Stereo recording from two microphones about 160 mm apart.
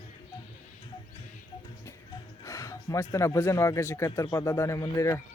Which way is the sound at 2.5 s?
20° left (ahead or behind).